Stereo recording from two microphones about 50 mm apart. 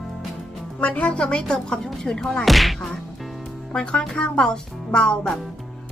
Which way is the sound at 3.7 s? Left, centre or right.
Centre.